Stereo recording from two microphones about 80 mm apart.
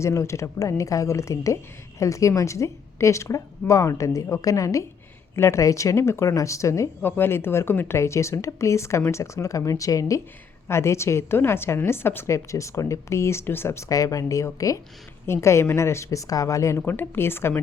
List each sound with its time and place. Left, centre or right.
0.0 s a woman's voice: left
7.0 s a woman's voice: left
16.8 s speech: left